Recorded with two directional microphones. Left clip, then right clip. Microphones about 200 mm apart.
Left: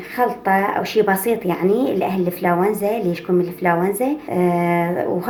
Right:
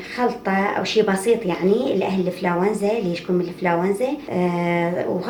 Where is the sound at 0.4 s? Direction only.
45° left (ahead or behind).